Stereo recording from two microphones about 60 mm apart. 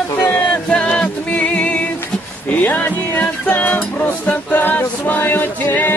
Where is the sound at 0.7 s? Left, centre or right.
Centre.